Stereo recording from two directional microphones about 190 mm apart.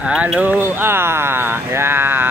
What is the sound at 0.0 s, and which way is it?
Speech, 5° right (ahead or behind).